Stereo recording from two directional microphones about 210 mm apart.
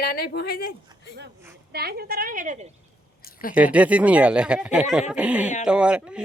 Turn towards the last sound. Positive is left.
turn(degrees=-5)  # may be behind; listen again after turning